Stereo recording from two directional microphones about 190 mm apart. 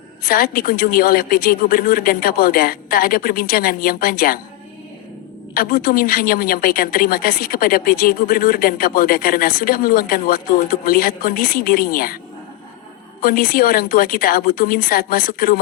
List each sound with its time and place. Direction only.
0.3 s a woman's voice: 50° left (ahead or behind)
5.5 s a woman's voice: 50° left (ahead or behind)
13.2 s a woman's voice: 50° left (ahead or behind)